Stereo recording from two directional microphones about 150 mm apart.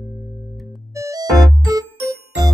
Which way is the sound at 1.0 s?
25° right (ahead or behind).